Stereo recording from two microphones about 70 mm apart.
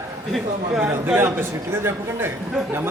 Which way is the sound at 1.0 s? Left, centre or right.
Right.